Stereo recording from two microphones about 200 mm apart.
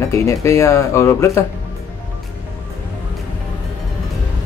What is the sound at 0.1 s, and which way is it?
Speech, 15° left (ahead or behind).